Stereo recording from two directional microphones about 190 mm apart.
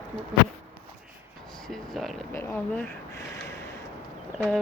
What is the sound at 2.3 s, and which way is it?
Speech, 10° left (ahead or behind).